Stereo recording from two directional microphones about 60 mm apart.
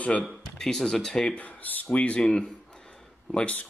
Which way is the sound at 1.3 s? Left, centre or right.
Left.